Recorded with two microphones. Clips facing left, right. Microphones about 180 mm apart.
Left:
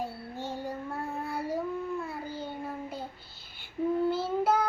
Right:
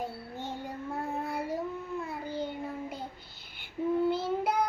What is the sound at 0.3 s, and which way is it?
Child singing, 20° right (ahead or behind).